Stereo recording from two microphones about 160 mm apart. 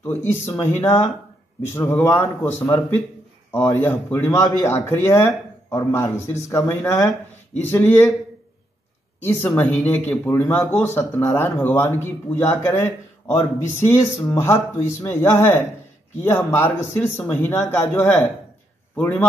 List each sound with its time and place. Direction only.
0.0 s speech: 10° left (ahead or behind)
9.2 s speech: 10° left (ahead or behind)
11.0 s speech: 15° left (ahead or behind)